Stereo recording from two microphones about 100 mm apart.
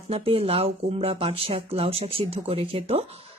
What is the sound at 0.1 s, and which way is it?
Speech, 75° right (ahead or behind).